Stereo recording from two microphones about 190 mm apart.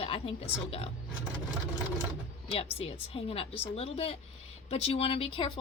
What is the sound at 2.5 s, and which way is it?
Speech, 30° left (ahead or behind).